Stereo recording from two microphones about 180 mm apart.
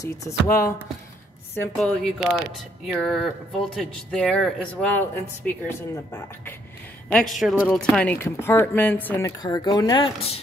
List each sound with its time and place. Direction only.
0.0 s speech: 15° left (ahead or behind)
1.8 s speech: centre (ahead or behind)
9.4 s speech: 25° left (ahead or behind)